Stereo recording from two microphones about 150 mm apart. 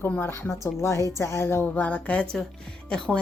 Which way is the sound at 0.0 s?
15° left (ahead or behind).